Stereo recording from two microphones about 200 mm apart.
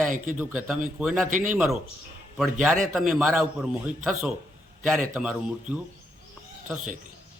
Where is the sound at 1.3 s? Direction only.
40° right (ahead or behind).